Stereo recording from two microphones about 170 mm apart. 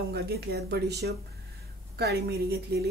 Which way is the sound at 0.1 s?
70° right (ahead or behind).